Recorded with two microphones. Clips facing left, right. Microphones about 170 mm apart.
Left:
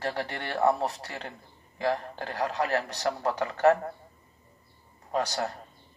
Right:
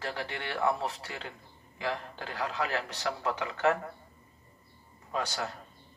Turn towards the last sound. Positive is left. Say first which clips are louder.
# left 5 dB
turn(degrees=40)  # may be behind; listen again after turning